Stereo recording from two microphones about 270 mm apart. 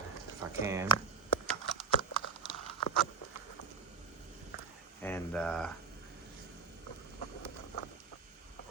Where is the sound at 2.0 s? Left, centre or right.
Centre.